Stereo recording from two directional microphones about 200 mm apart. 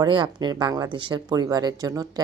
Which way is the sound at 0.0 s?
20° right (ahead or behind).